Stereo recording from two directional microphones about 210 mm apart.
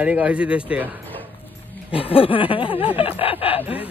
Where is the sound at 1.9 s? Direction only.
25° left (ahead or behind).